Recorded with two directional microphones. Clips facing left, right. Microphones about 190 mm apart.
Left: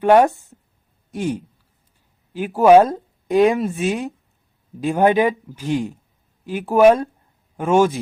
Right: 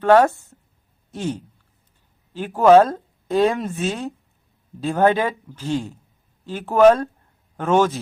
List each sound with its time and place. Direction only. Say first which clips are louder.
0.0 s a man's voice: left 1 dB; 15° left (ahead or behind)